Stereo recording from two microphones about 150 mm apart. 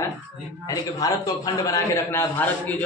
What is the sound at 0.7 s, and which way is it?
A man's voice, 25° left (ahead or behind).